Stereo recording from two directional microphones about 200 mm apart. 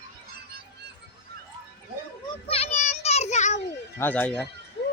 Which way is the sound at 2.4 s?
30° left (ahead or behind).